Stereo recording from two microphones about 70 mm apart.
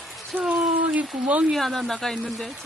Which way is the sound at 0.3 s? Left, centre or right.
Centre.